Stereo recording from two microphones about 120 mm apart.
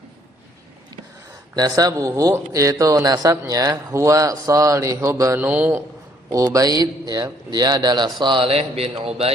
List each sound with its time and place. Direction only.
1.5 s speech: 35° right (ahead or behind)
5.4 s a man's voice: 15° right (ahead or behind)
6.3 s a man's voice: 30° right (ahead or behind); by 9.3 s 55° right (ahead or behind)